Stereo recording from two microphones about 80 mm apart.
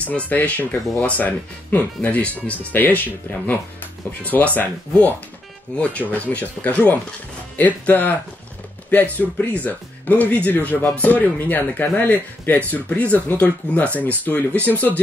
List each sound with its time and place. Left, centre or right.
0.0 s speech: centre
4.2 s speech: centre
9.2 s speech: left